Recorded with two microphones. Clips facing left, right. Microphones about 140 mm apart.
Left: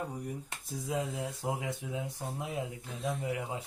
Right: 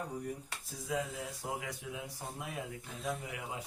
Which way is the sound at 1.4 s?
20° left (ahead or behind).